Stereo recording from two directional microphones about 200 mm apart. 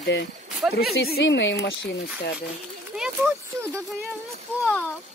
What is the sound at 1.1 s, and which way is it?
Speech, 65° left (ahead or behind).